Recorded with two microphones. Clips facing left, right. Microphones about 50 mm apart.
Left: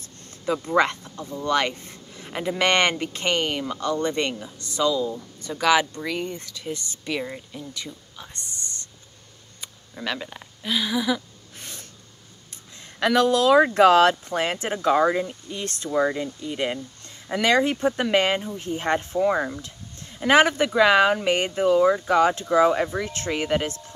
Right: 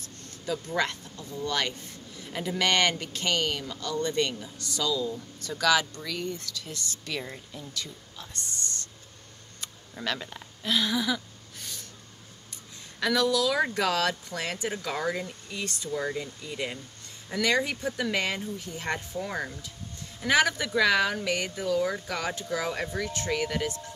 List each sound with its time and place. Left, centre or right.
0.0 s speech: left
9.6 s speech: centre
11.5 s snort: left
12.8 s speech: left
15.6 s speech: left
16.2 s speech: left
19.2 s speech: left
20.2 s speech: left